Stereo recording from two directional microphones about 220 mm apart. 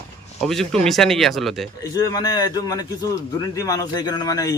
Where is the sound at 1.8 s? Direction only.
15° left (ahead or behind).